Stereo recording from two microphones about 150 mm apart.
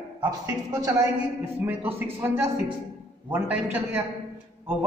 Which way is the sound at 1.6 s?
15° right (ahead or behind).